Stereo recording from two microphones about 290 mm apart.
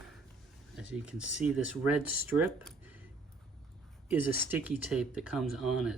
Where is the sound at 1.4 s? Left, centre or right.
Centre.